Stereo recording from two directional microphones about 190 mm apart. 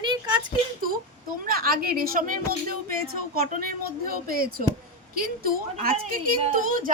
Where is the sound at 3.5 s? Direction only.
50° right (ahead or behind).